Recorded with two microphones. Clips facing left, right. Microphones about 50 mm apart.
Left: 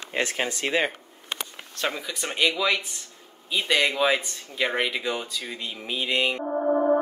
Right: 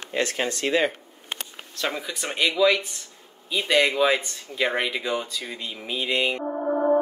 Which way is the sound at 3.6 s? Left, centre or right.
Centre.